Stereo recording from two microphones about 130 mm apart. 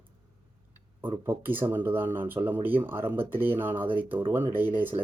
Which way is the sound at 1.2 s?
15° right (ahead or behind).